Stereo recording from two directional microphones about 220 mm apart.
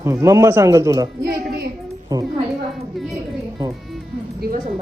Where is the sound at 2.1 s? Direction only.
15° right (ahead or behind).